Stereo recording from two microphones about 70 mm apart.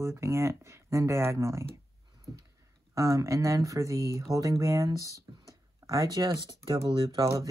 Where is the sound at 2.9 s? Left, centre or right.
Right.